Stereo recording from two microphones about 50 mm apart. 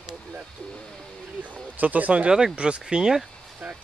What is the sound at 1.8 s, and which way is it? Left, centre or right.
Speech, right.